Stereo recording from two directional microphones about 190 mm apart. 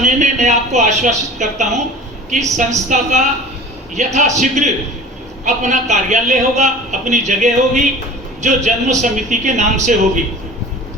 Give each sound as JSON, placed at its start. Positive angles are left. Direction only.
{"t": 0.0, "sound": "a man's voice", "side_deg": -40}